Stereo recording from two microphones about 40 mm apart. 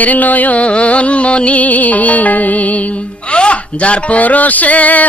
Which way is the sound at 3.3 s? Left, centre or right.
Left.